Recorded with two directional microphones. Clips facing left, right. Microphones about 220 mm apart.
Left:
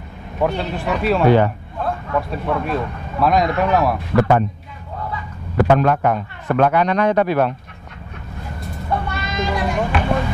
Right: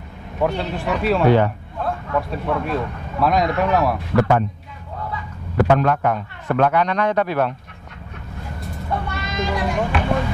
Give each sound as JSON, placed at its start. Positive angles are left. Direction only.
{"t": 0.4, "sound": "a man's voice", "side_deg": 20}
{"t": 9.2, "sound": "speech", "side_deg": 15}